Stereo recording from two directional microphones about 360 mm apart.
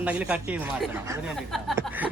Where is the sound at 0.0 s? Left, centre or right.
Centre.